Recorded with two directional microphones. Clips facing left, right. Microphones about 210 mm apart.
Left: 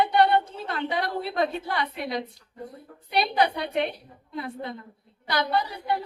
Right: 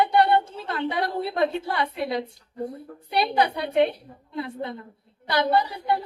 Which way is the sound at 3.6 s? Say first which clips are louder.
Right 6 dB; 30° right (ahead or behind).